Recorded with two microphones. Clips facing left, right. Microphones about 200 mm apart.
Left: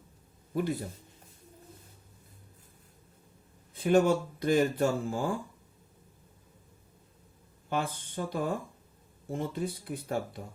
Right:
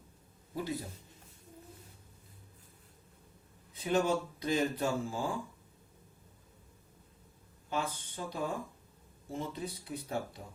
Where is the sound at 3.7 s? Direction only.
55° left (ahead or behind).